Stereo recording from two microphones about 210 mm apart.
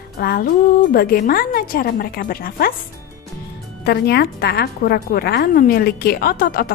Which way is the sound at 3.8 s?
50° left (ahead or behind).